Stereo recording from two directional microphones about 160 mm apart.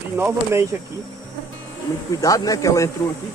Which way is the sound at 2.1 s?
20° left (ahead or behind).